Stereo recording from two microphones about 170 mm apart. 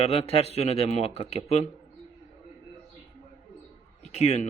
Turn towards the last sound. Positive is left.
turn(degrees=40)  # may be behind; listen again after turning